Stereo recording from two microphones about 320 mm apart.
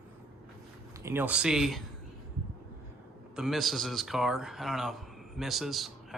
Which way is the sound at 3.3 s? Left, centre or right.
Centre.